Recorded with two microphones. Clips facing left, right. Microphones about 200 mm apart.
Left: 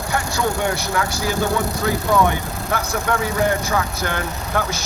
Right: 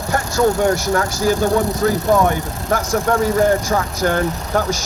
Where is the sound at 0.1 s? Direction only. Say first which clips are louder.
Right 6 dB; 45° right (ahead or behind).